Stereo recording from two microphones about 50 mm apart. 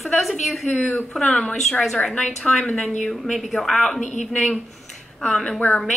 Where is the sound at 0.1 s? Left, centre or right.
Centre.